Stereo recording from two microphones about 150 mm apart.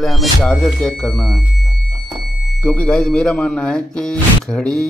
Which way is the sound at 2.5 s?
10° left (ahead or behind).